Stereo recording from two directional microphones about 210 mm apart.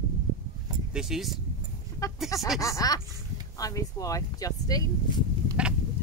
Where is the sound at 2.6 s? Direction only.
15° left (ahead or behind).